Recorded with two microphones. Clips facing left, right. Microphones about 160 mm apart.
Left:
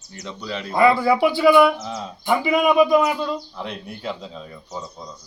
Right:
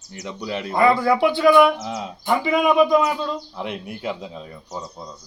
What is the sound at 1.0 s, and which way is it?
Speech, 5° left (ahead or behind).